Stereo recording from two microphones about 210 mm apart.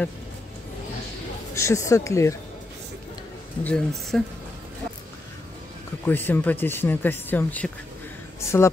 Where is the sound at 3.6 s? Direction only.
5° left (ahead or behind).